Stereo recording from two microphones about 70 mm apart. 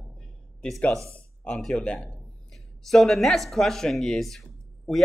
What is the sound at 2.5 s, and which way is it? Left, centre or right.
Speech, centre.